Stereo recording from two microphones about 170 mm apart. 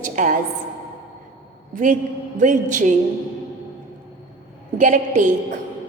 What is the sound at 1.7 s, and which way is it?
A woman's voice, 50° right (ahead or behind).